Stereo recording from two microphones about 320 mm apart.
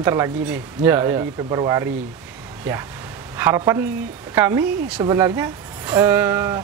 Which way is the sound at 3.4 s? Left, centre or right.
Centre.